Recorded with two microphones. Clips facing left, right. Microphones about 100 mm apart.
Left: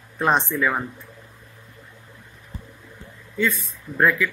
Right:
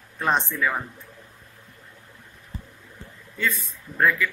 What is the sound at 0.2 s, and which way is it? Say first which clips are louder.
Speech: left 3 dB; 10° left (ahead or behind).